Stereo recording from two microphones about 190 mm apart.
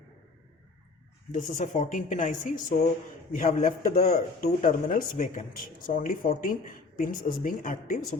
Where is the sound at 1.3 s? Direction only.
40° left (ahead or behind).